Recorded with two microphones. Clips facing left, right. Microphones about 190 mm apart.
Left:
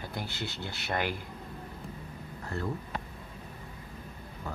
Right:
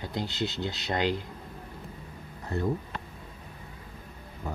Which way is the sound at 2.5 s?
20° right (ahead or behind).